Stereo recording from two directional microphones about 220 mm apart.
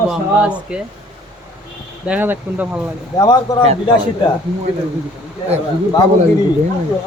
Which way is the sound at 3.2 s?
20° left (ahead or behind).